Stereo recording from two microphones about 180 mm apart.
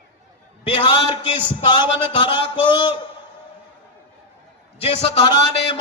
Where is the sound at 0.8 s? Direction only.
25° left (ahead or behind).